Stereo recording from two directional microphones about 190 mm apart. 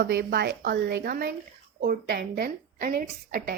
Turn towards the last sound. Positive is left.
turn(degrees=-50)  # may be behind; listen again after turning